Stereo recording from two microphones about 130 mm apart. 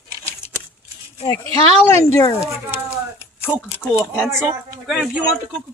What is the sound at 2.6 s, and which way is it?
Speech, 15° right (ahead or behind).